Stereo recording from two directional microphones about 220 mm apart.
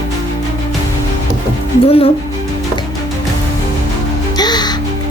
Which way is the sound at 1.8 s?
25° left (ahead or behind).